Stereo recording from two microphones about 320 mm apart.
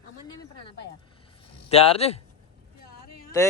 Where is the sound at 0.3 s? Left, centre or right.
Centre.